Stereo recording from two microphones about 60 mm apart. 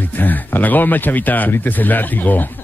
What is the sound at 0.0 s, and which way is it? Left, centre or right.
Speech, left.